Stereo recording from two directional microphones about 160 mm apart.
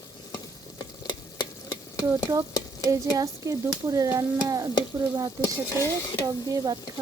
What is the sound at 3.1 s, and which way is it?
Stir, 20° right (ahead or behind).